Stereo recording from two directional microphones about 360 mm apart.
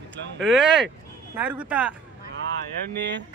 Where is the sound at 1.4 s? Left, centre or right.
Centre.